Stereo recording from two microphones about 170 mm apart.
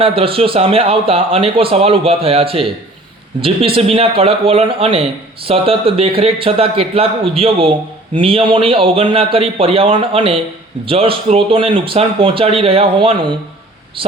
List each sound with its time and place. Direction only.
0.0 s speech: 35° right (ahead or behind)